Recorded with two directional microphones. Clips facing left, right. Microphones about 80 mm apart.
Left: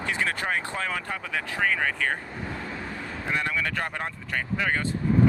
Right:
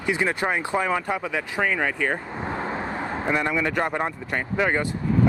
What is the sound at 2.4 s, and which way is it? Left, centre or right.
Vehicle, right.